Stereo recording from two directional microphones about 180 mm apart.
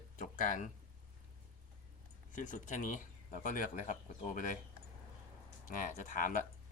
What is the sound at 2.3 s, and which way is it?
Speech, 45° left (ahead or behind).